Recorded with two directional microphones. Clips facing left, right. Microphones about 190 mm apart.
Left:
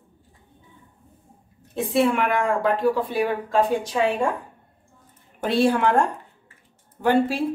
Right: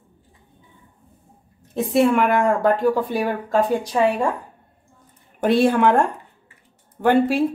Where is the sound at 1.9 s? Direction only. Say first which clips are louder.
Right 4 dB; 50° right (ahead or behind).